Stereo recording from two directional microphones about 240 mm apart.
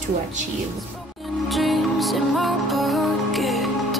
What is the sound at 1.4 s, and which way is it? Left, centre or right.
Music, centre.